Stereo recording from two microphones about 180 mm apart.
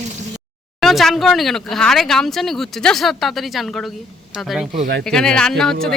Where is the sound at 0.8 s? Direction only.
Centre (ahead or behind).